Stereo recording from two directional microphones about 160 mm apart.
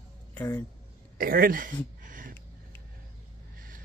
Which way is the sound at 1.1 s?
65° right (ahead or behind).